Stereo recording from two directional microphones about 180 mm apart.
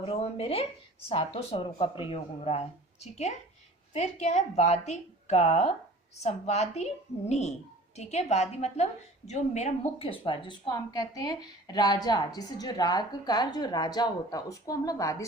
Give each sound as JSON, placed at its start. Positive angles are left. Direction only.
{"t": 0.1, "sound": "a woman's voice", "side_deg": 35}